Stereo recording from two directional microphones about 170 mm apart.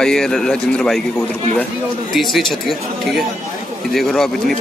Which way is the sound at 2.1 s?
Centre (ahead or behind).